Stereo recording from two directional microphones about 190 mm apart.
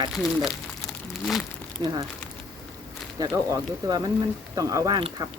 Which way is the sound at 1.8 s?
25° right (ahead or behind).